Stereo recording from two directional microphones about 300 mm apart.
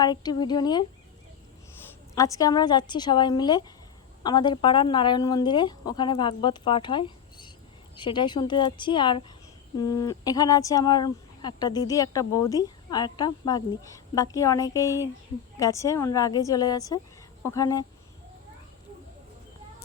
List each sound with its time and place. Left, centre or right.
0.0 s speech: centre
2.1 s speech: centre